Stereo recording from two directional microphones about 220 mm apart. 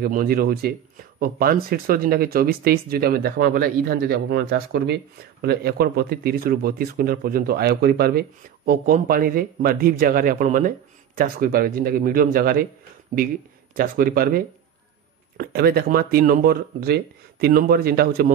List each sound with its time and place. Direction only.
0.0 s speech: 40° right (ahead or behind)
13.7 s speech: 40° right (ahead or behind)